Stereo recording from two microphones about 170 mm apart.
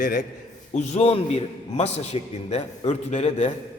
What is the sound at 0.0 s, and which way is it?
Speech, 60° left (ahead or behind).